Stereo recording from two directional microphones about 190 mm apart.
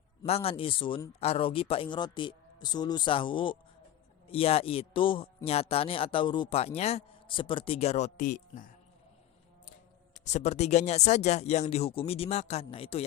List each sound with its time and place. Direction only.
0.3 s a man's voice: 30° left (ahead or behind)
10.2 s a man's voice: 40° left (ahead or behind)